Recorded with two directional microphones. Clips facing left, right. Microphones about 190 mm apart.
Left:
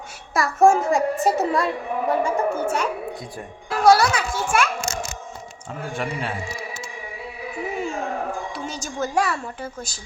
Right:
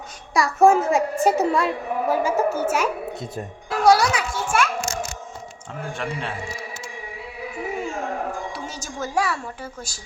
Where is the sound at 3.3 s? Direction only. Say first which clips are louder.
Right 1 dB; 15° right (ahead or behind).